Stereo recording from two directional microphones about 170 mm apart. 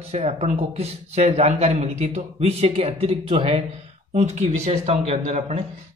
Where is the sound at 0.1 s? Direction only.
40° right (ahead or behind).